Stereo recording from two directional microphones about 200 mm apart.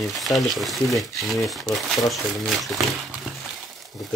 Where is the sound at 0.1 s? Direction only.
Centre (ahead or behind).